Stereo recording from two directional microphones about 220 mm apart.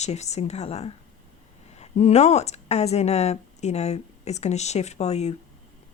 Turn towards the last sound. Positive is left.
turn(degrees=30)  # may be behind; listen again after turning